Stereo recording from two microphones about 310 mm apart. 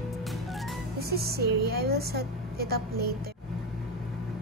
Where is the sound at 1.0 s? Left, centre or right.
Right.